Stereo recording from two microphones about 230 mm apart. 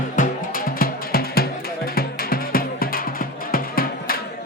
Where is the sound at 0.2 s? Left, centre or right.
Left.